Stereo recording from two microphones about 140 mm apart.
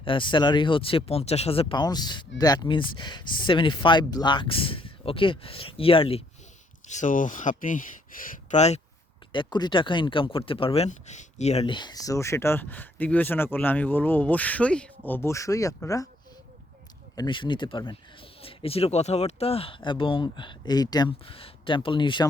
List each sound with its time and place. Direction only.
0.0 s speech: 35° left (ahead or behind)
6.8 s speech: 60° left (ahead or behind)
9.3 s speech: 35° left (ahead or behind)
10.8 s speech: 60° left (ahead or behind)
11.6 s speech: 35° left (ahead or behind)
17.2 s speech: 35° left (ahead or behind)